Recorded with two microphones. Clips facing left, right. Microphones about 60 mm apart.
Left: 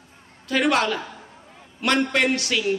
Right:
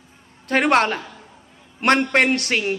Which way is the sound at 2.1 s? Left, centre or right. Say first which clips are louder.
Right 3 dB; right.